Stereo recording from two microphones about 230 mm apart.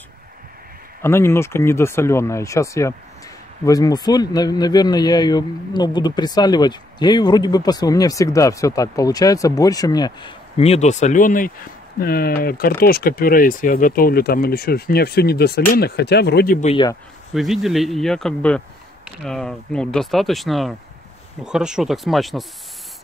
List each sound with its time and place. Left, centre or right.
1.0 s speech: centre; by 16.5 s left
16.6 s speech: left
17.3 s speech: centre